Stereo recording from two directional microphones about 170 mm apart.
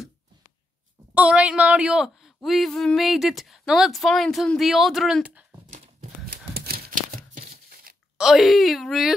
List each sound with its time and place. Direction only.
1.1 s speech: 10° right (ahead or behind)
6.5 s crumpling: 65° right (ahead or behind)
8.2 s speech: centre (ahead or behind)